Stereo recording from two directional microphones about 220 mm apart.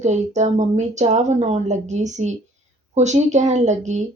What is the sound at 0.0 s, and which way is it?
Speech, 30° right (ahead or behind).